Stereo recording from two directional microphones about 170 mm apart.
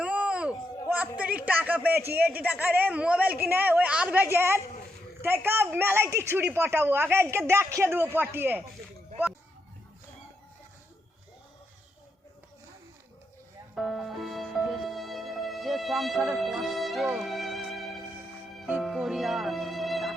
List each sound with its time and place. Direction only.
0.0 s speech: 5° right (ahead or behind)
13.7 s music: centre (ahead or behind)